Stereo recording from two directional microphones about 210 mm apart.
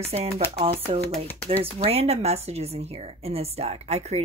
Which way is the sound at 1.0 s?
10° left (ahead or behind).